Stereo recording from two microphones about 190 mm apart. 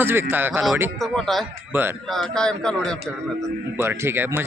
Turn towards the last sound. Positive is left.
turn(degrees=-10)  # may be behind; listen again after turning